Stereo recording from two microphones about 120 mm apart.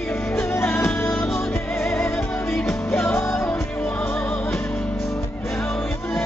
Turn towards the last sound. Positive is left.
turn(degrees=20)  # may be behind; listen again after turning